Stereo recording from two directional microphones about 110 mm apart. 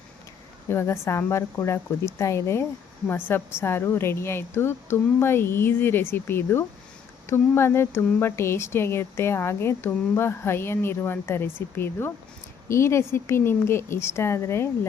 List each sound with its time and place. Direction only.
0.7 s speech: 25° left (ahead or behind)